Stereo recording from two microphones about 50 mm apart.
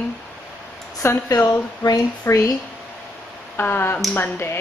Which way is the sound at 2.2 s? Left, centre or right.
Left.